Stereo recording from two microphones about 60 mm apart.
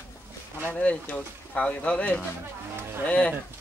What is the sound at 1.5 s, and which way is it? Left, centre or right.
Speech, centre.